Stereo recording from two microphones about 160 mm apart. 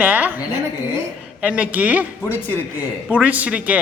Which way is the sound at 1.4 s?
10° right (ahead or behind).